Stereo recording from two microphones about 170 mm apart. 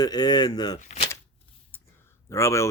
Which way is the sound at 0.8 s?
45° left (ahead or behind).